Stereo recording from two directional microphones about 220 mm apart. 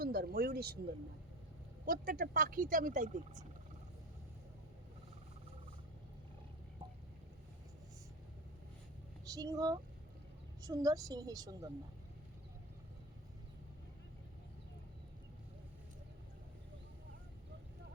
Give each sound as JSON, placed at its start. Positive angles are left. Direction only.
{"t": 0.0, "sound": "speech", "side_deg": -45}
{"t": 1.8, "sound": "speech", "side_deg": -40}
{"t": 9.2, "sound": "a woman's voice", "side_deg": -15}